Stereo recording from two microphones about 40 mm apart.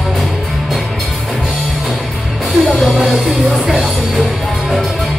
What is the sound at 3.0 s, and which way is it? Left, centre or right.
Music, centre.